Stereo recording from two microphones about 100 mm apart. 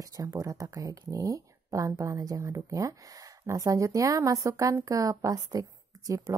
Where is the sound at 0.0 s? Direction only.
35° right (ahead or behind).